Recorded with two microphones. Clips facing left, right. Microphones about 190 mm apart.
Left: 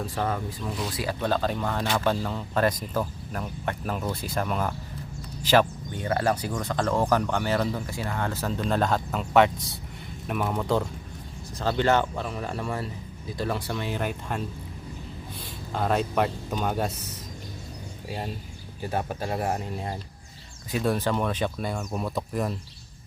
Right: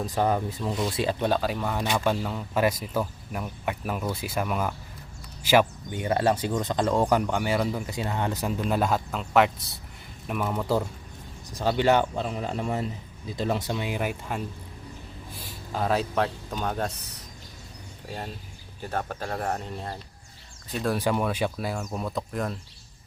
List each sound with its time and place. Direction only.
0.0 s speech: 15° right (ahead or behind)
1.3 s speech: 5° right (ahead or behind)
11.5 s speech: 15° right (ahead or behind)
15.7 s speech: centre (ahead or behind)
18.8 s speech: 10° left (ahead or behind)
21.0 s speech: 10° right (ahead or behind)